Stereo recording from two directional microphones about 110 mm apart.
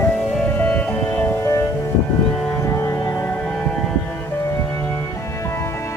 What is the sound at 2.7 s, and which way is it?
Music, 25° left (ahead or behind).